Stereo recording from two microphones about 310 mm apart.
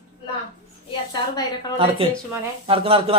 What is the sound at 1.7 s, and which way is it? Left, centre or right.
A man's voice, centre.